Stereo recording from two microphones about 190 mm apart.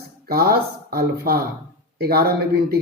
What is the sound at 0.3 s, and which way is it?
Speech, 50° right (ahead or behind).